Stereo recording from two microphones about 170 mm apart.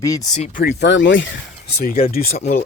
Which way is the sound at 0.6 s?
75° left (ahead or behind).